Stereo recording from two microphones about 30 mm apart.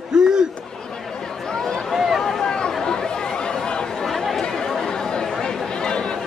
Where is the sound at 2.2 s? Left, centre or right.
Centre.